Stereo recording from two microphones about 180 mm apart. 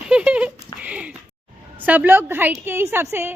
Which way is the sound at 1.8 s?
10° right (ahead or behind).